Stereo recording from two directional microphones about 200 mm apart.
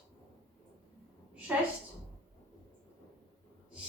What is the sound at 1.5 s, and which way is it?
Speech, 5° right (ahead or behind).